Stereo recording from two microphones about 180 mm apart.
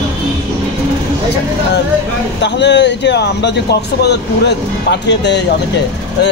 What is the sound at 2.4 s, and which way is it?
Speech, 75° left (ahead or behind).